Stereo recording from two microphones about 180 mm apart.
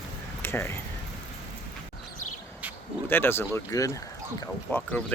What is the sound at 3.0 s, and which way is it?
Speech, 10° left (ahead or behind).